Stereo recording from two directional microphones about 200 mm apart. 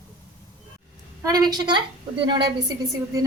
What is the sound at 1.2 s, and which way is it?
A woman's voice, 20° right (ahead or behind).